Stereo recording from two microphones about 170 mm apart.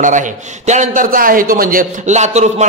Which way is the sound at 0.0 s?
50° right (ahead or behind).